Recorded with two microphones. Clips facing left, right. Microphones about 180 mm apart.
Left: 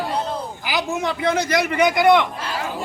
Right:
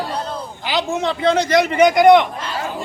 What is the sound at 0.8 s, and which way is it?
Speech, 25° right (ahead or behind).